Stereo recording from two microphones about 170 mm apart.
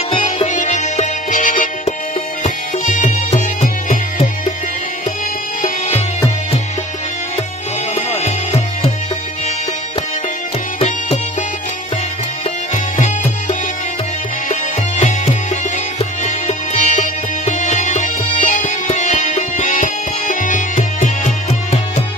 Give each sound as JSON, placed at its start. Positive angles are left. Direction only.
{"t": 0.1, "sound": "music", "side_deg": 35}
{"t": 7.9, "sound": "music", "side_deg": 40}
{"t": 10.8, "sound": "music", "side_deg": 40}
{"t": 14.5, "sound": "music", "side_deg": 40}